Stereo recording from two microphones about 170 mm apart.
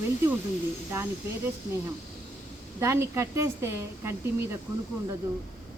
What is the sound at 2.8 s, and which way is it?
A woman's voice, 15° right (ahead or behind).